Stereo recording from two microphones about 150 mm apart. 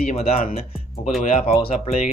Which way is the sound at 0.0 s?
45° left (ahead or behind).